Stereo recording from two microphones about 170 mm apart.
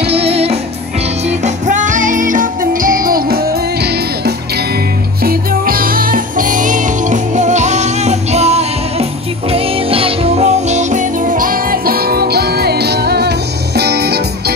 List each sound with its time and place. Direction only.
0.0 s music: 35° right (ahead or behind); by 4.3 s 70° right (ahead or behind)
5.2 s music: 60° right (ahead or behind)